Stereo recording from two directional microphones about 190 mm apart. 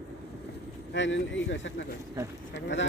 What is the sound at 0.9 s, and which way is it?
Speech, 70° left (ahead or behind).